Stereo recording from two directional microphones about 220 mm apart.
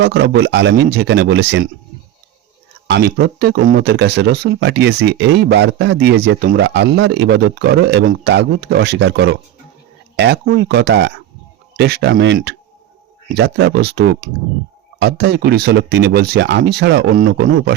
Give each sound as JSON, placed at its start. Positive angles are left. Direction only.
{"t": 0.0, "sound": "speech", "side_deg": -50}
{"t": 2.8, "sound": "speech", "side_deg": -50}